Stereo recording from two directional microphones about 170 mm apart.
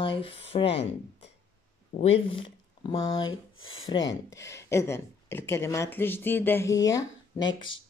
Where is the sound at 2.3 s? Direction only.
30° left (ahead or behind).